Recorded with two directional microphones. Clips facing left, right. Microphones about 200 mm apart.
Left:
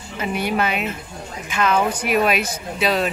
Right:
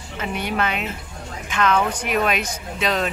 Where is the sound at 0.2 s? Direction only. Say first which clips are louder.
Left 3 dB; 10° left (ahead or behind).